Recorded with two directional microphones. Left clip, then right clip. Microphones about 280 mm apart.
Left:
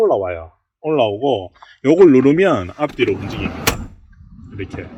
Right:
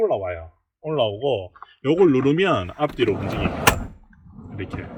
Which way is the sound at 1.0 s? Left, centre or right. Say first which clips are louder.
Left 3 dB; left.